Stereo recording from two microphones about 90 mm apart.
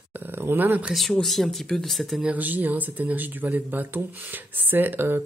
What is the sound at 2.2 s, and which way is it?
Speech, 20° right (ahead or behind).